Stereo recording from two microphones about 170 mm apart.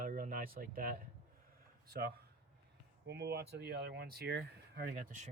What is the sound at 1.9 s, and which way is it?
Speech, 65° right (ahead or behind).